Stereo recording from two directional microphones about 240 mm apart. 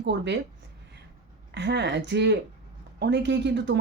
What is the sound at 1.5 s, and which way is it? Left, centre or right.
Speech, right.